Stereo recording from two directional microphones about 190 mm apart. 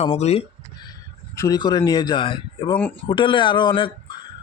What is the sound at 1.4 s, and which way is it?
A man's voice, 20° left (ahead or behind).